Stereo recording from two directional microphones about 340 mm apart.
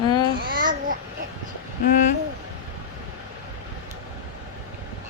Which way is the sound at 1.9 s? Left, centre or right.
Left.